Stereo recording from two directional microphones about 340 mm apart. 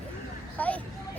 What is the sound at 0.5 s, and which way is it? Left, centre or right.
Speech, centre.